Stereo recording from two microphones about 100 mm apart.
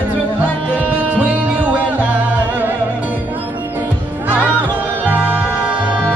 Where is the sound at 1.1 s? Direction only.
15° right (ahead or behind).